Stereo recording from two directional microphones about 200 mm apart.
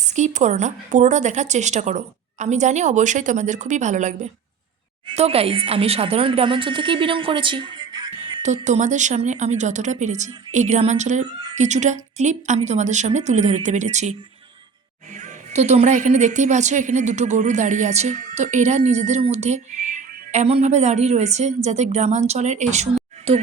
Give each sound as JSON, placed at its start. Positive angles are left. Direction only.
{"t": 0.0, "sound": "a woman's voice", "side_deg": -35}
{"t": 8.4, "sound": "a woman's voice", "side_deg": -35}